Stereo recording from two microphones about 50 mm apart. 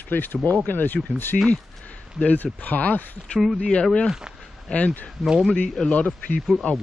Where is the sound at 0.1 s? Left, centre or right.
Left.